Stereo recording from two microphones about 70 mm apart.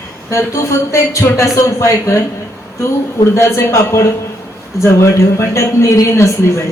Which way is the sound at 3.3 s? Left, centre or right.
Left.